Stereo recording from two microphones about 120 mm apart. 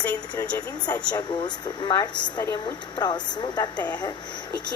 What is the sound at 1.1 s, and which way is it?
Speech, 35° left (ahead or behind).